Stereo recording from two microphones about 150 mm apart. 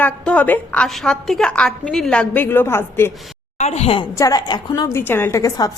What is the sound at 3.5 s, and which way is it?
Speech, 45° left (ahead or behind).